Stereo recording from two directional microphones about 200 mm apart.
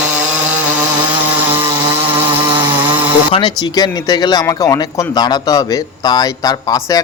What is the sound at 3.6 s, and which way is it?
Speech, 20° left (ahead or behind).